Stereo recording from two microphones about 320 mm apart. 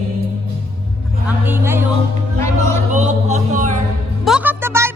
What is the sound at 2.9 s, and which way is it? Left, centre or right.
Music, right.